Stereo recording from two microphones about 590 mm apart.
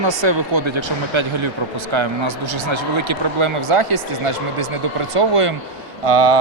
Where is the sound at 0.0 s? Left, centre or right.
Right.